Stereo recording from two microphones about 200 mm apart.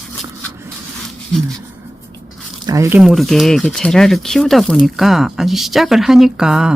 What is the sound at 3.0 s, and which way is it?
Speech, centre (ahead or behind).